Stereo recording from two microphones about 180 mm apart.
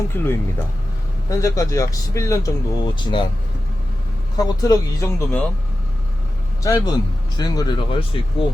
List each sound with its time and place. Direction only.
0.1 s speech: 10° left (ahead or behind); by 3.2 s 25° left (ahead or behind)
4.4 s speech: 20° left (ahead or behind)
6.6 s speech: 20° left (ahead or behind)